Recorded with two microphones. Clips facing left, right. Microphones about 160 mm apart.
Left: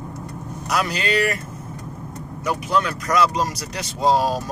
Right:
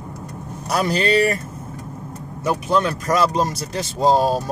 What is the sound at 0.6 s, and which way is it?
Speech, 30° right (ahead or behind).